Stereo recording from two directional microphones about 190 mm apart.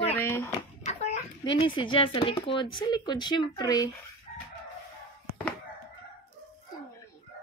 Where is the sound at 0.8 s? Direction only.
35° left (ahead or behind).